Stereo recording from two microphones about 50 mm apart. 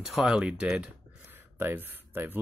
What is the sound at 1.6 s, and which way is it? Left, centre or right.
Speech, right.